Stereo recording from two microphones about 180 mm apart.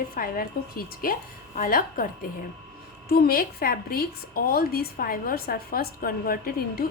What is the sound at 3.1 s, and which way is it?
A woman's voice, 60° left (ahead or behind).